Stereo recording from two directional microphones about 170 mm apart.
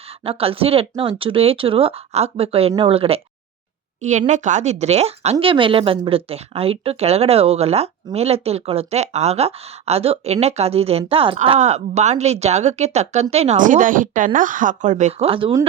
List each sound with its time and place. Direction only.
0.3 s speech: 35° right (ahead or behind)
4.0 s a woman's voice: 45° right (ahead or behind)